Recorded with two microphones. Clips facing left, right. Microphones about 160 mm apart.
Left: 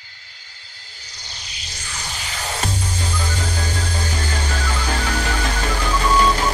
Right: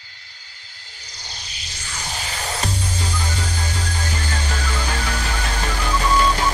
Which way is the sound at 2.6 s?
40° left (ahead or behind).